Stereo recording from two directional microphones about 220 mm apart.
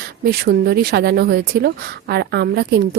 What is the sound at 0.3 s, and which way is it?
A woman's voice, 45° right (ahead or behind).